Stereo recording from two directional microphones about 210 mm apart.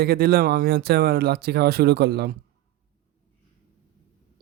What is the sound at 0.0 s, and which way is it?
Speech, 50° right (ahead or behind).